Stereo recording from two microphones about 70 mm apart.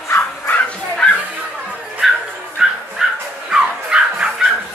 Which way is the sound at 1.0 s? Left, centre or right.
Centre.